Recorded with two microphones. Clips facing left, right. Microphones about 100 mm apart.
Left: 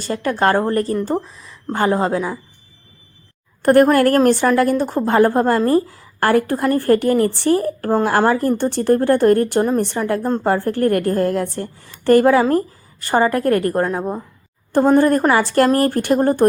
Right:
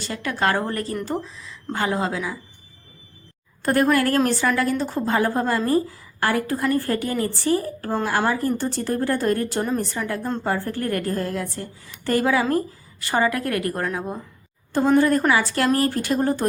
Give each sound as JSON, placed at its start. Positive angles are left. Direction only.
{"t": 0.1, "sound": "a woman's voice", "side_deg": 40}
{"t": 3.6, "sound": "a woman's voice", "side_deg": 60}
{"t": 3.8, "sound": "a woman's voice", "side_deg": 45}
{"t": 10.4, "sound": "a woman's voice", "side_deg": 60}
{"t": 12.4, "sound": "a woman's voice", "side_deg": 40}